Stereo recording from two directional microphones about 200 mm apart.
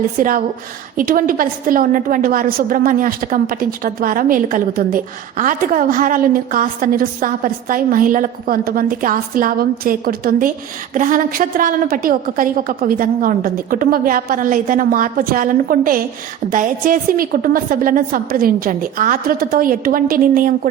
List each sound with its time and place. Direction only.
0.2 s a woman's voice: 45° right (ahead or behind)